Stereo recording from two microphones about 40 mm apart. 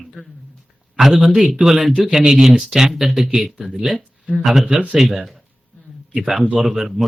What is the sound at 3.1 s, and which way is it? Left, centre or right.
A man's voice, centre.